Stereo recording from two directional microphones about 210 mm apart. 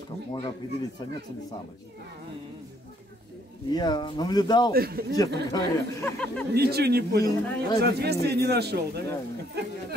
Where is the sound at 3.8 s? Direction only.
20° left (ahead or behind).